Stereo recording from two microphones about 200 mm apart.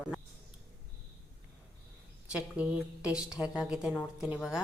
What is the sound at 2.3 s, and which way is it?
A woman's voice, 5° right (ahead or behind).